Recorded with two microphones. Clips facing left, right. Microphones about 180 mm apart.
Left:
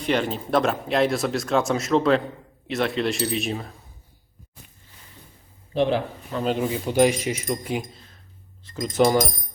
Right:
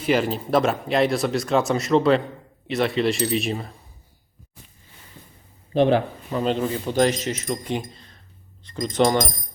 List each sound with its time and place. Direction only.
0.0 s speech: 5° right (ahead or behind)
5.7 s speech: 55° right (ahead or behind)
6.6 s speech: 10° left (ahead or behind)